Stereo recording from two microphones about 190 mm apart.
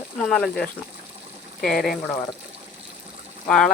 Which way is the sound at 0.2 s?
Centre (ahead or behind).